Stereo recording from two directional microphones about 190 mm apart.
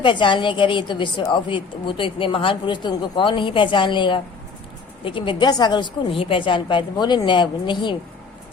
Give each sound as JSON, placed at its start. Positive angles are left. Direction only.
{"t": 0.0, "sound": "a woman's voice", "side_deg": 25}